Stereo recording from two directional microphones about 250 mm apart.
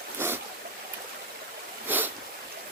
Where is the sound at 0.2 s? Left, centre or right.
Centre.